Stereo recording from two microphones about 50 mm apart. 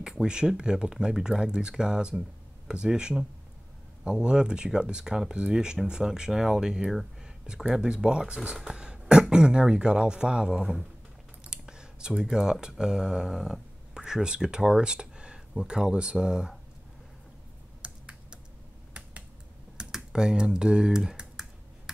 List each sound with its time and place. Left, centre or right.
0.0 s speech: centre
8.7 s cough: centre
9.0 s speech: centre
17.8 s computer keyboard: centre
19.8 s typing: centre